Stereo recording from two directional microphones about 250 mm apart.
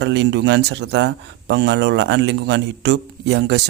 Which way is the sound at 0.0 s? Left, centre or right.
Right.